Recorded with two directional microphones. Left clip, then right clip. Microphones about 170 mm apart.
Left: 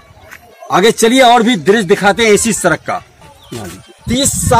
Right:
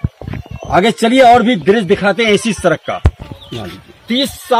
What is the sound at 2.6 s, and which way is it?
Speech, 40° right (ahead or behind).